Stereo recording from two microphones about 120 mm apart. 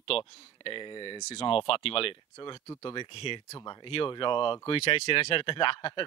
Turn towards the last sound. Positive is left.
turn(degrees=45)  # may be behind; listen again after turning